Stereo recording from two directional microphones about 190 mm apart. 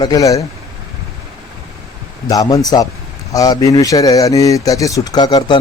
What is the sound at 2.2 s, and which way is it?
Speech, 20° left (ahead or behind).